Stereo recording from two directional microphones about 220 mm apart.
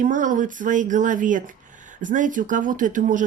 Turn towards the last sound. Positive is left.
turn(degrees=-35)  # may be behind; listen again after turning